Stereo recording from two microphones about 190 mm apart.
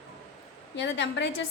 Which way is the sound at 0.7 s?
65° left (ahead or behind).